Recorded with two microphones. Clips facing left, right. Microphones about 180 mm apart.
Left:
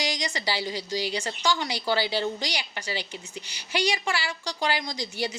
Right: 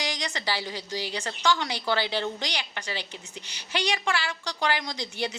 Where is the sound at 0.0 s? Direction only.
15° left (ahead or behind).